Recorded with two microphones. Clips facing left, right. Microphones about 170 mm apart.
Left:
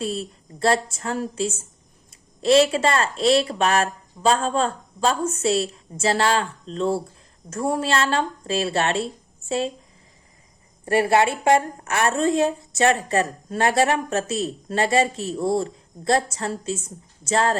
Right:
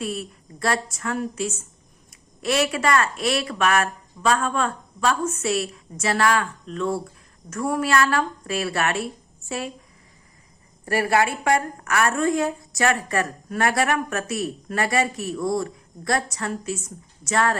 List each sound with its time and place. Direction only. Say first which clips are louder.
0.0 s a woman's voice: left 2 dB; 30° left (ahead or behind)
10.8 s a woman's voice: left 3 dB; 25° left (ahead or behind)